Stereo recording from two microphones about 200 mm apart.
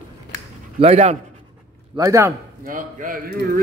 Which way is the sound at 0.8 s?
30° right (ahead or behind).